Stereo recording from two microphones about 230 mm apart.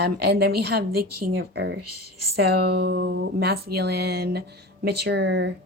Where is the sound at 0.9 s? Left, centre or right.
Right.